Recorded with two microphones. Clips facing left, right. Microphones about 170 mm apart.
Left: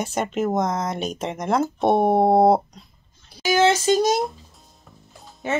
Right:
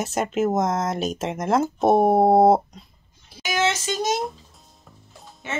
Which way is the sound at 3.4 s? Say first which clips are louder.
Left 6 dB; 30° left (ahead or behind).